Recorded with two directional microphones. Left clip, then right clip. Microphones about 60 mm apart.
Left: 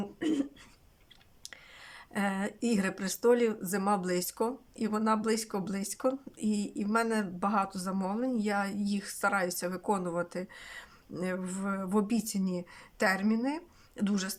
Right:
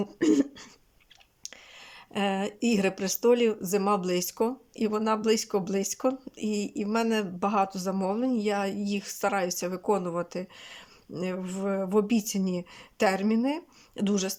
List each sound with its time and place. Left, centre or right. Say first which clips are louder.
2.1 s speech: right 5 dB; right
14.0 s speech: right 5 dB; right